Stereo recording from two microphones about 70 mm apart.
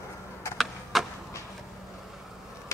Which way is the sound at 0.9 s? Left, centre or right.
Centre.